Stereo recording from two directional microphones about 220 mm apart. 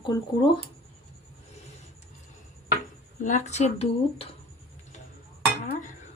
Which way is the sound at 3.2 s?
30° left (ahead or behind).